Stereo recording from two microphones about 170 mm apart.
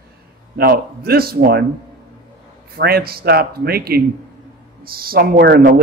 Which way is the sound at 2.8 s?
65° right (ahead or behind).